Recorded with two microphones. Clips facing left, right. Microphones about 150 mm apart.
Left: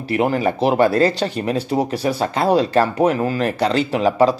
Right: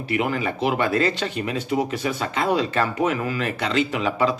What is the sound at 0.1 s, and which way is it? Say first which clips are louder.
Speech: left 6 dB; 40° left (ahead or behind).